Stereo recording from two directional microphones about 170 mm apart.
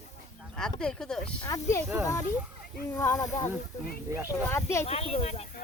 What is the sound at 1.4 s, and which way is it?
Speech, 20° left (ahead or behind).